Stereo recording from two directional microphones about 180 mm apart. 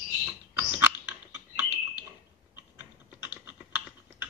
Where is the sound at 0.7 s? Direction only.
10° right (ahead or behind).